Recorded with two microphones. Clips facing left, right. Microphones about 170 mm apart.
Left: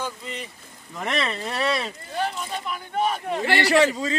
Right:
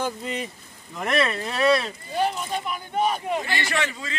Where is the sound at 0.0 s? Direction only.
45° right (ahead or behind).